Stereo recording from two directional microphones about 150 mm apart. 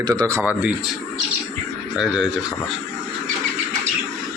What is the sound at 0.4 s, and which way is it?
Speech, 10° right (ahead or behind).